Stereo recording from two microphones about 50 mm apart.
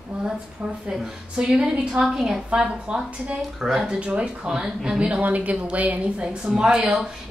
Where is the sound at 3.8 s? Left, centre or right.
Right.